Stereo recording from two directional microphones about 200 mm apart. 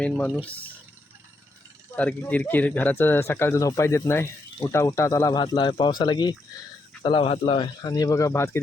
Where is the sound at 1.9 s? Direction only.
5° left (ahead or behind).